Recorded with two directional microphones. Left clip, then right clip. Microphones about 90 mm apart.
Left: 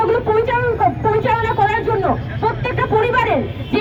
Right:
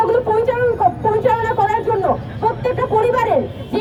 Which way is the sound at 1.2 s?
30° right (ahead or behind).